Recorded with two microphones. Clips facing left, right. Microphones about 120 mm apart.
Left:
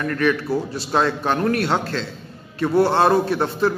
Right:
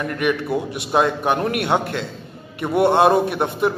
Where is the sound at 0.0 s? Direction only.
20° right (ahead or behind).